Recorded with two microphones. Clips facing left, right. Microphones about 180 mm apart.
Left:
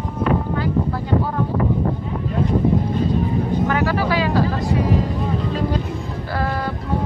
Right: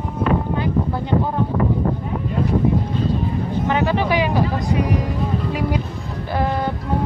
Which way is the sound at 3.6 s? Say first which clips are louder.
Right 4 dB; 20° right (ahead or behind).